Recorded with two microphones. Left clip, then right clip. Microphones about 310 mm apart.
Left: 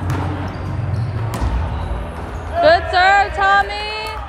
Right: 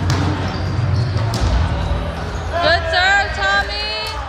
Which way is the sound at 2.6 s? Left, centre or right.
Left.